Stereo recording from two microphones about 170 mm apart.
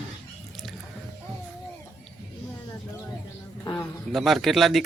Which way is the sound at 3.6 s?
20° left (ahead or behind).